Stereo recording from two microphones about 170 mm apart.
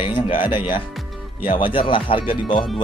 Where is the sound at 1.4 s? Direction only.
30° left (ahead or behind).